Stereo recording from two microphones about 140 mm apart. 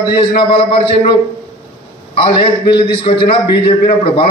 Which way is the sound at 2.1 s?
40° left (ahead or behind).